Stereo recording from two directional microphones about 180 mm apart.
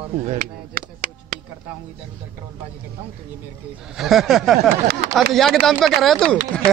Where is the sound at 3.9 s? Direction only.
Centre (ahead or behind).